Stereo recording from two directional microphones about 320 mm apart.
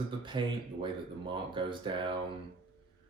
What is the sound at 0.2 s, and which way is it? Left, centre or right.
Speech, centre.